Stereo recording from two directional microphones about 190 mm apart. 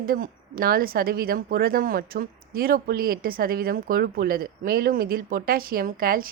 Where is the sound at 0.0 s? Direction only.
50° right (ahead or behind).